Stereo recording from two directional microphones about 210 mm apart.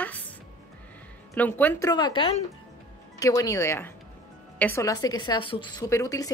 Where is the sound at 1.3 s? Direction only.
10° left (ahead or behind).